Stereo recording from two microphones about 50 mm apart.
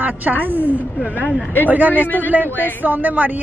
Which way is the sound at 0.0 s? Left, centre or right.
Right.